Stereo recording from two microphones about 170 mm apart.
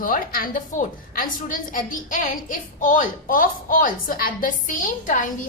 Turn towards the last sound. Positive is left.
turn(degrees=50)  # may be behind; listen again after turning